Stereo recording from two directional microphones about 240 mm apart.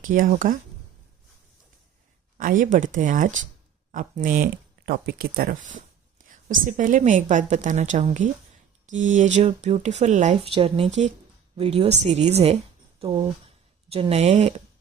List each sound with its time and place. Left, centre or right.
0.0 s a woman's voice: right
2.4 s a woman's voice: right